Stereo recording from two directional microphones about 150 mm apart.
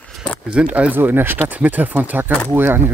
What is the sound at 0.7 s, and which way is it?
Speech, 10° right (ahead or behind).